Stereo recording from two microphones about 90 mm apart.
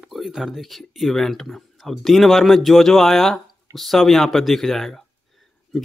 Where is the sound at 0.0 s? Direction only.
5° right (ahead or behind).